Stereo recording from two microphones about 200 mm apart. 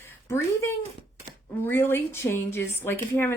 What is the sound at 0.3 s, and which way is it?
A woman's voice, 10° left (ahead or behind).